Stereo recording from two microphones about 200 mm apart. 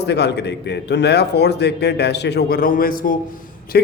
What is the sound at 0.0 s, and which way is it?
A man's voice, 55° left (ahead or behind).